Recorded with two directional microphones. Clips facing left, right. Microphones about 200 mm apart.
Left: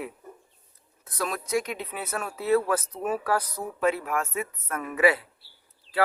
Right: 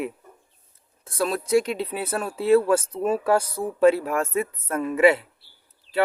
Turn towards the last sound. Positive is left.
turn(degrees=-25)  # may be behind; listen again after turning